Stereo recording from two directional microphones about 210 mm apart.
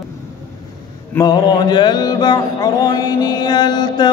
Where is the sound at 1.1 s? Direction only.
20° left (ahead or behind).